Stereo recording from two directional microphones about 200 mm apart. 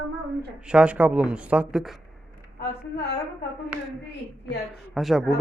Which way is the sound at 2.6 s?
55° left (ahead or behind).